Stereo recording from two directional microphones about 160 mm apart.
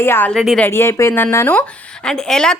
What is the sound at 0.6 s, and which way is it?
A woman's voice, 15° left (ahead or behind).